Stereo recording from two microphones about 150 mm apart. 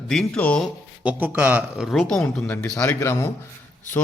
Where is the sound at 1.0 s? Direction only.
10° right (ahead or behind).